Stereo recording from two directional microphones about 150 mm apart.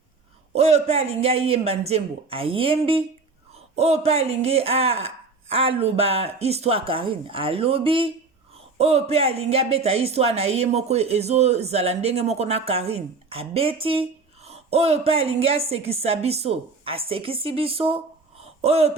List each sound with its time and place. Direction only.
0.5 s a woman's voice: 45° right (ahead or behind)